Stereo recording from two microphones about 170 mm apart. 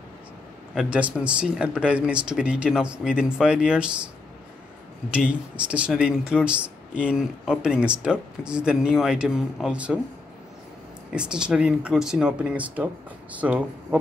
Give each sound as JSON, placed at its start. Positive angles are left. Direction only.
{"t": 0.7, "sound": "speech", "side_deg": -10}
{"t": 5.1, "sound": "speech", "side_deg": -5}
{"t": 11.1, "sound": "speech", "side_deg": -5}